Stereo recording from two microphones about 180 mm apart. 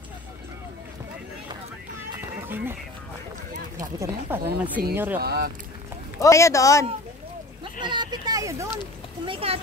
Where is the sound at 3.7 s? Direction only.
15° right (ahead or behind).